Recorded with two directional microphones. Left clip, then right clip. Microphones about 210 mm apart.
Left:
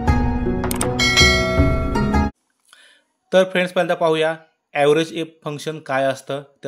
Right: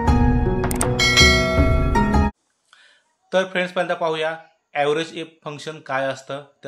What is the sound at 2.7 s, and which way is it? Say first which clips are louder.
A man's voice: left 2 dB; 45° left (ahead or behind).